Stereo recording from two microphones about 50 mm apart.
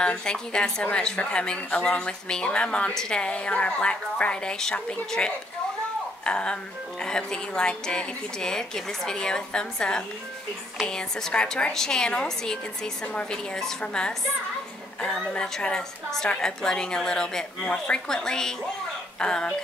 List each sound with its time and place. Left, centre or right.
0.0 s a woman's voice: centre
3.2 s a woman's voice: left